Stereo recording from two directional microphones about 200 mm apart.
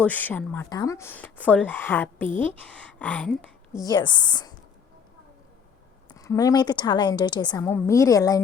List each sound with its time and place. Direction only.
0.0 s a woman's voice: 10° left (ahead or behind)
3.8 s a woman's voice: 20° left (ahead or behind)
6.1 s speech: 15° left (ahead or behind)